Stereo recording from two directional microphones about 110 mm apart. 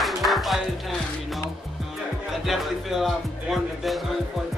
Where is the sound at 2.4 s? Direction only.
Centre (ahead or behind).